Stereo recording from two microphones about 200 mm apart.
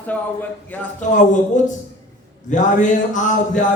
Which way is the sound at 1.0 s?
40° left (ahead or behind).